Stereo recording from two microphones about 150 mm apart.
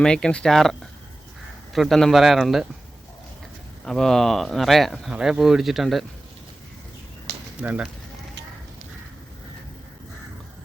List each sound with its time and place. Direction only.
0.0 s speech: 5° left (ahead or behind)
3.8 s speech: centre (ahead or behind)
7.3 s a sound: 90° right
7.6 s speech: 10° right (ahead or behind)